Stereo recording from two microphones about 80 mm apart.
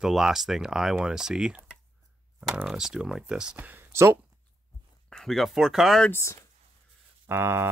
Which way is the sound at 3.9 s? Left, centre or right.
Right.